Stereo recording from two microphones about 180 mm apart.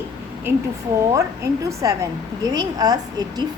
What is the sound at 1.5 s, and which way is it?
A woman's voice, 20° right (ahead or behind).